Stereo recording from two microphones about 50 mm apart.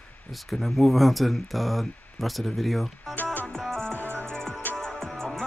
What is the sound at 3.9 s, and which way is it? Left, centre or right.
Music, right.